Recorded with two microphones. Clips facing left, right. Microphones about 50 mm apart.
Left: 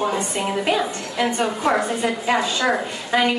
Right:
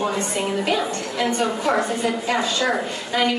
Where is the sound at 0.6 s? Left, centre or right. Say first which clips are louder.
Left 1 dB; left.